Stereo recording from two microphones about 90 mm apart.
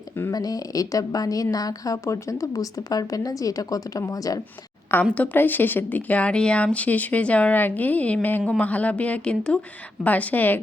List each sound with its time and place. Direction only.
0.3 s a woman's voice: 45° left (ahead or behind)
5.1 s speech: 20° left (ahead or behind)